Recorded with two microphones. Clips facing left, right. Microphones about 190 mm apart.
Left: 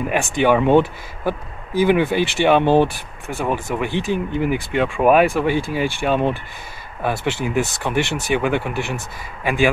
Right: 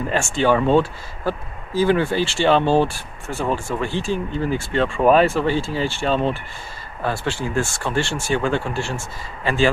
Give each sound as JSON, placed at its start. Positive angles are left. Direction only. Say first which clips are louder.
{"t": 0.0, "sound": "speech", "louder": "left 2 dB", "side_deg": 15}